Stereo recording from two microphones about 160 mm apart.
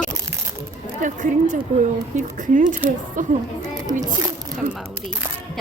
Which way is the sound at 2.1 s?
50° right (ahead or behind).